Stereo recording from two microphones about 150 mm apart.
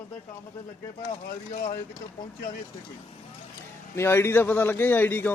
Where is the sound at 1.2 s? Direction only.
75° left (ahead or behind).